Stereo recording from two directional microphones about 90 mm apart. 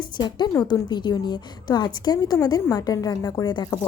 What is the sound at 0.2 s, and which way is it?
A woman's voice, 55° left (ahead or behind).